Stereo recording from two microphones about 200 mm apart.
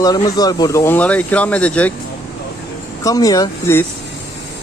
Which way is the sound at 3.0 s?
15° left (ahead or behind).